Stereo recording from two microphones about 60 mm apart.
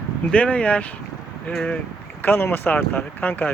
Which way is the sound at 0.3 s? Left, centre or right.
Left.